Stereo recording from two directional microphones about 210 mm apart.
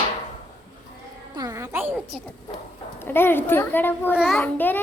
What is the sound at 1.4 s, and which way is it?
Music, 15° right (ahead or behind).